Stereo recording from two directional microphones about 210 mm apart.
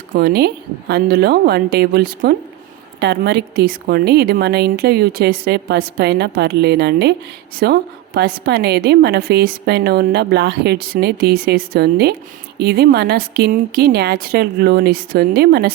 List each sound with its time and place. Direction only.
0.1 s a woman's voice: 50° right (ahead or behind)